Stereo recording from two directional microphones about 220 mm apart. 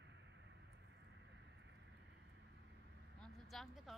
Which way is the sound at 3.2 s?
Centre (ahead or behind).